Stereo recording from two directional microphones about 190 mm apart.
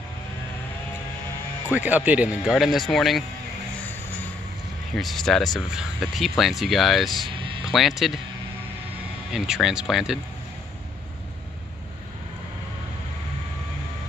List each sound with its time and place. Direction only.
1.7 s speech: 10° right (ahead or behind)
4.9 s speech: centre (ahead or behind)
9.3 s speech: 5° right (ahead or behind)